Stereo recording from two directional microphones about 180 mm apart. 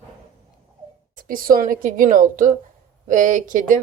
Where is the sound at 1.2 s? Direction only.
50° right (ahead or behind).